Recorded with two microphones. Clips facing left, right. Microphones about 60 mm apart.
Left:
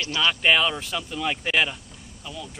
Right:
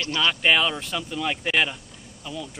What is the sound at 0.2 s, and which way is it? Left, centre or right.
Speech, centre.